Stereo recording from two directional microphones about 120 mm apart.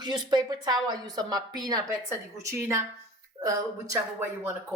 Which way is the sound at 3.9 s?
20° right (ahead or behind).